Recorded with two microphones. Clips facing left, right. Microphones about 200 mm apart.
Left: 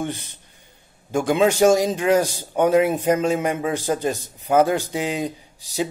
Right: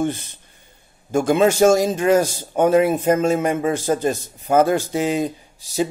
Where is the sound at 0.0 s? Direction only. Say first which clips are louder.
Right 5 dB; 15° left (ahead or behind).